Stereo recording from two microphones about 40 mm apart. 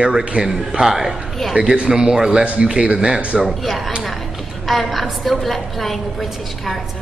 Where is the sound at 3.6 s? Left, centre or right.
Centre.